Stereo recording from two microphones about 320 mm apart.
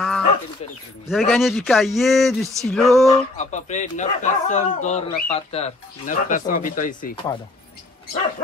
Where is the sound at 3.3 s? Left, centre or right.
Left.